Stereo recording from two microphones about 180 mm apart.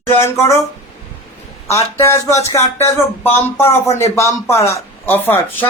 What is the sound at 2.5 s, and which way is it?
Speech, 15° left (ahead or behind).